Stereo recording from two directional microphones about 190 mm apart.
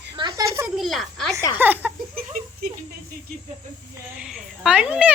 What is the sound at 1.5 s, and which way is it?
Speech, 10° right (ahead or behind).